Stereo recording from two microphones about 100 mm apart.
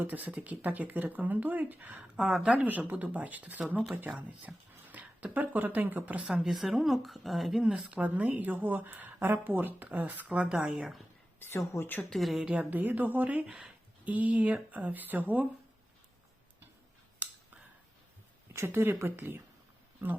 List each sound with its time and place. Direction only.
0.0 s speech: 15° right (ahead or behind)
11.3 s a woman's voice: 25° left (ahead or behind)
12.0 s speech: centre (ahead or behind); by 15.4 s 15° right (ahead or behind)
18.5 s speech: 25° right (ahead or behind)